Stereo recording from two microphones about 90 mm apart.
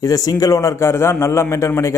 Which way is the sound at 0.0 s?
45° left (ahead or behind).